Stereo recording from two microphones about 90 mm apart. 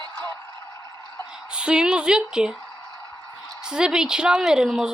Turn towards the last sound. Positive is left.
turn(degrees=-5)  # may be behind; listen again after turning